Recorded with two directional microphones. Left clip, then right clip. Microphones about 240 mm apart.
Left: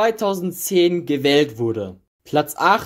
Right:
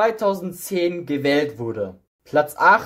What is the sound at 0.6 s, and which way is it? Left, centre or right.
Speech, left.